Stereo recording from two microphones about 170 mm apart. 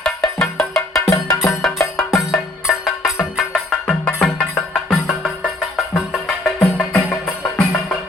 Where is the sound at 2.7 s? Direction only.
Centre (ahead or behind).